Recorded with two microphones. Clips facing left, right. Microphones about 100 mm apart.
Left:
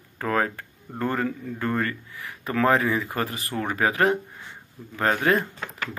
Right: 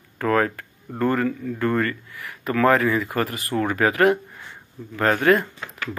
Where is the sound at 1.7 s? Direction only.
25° left (ahead or behind).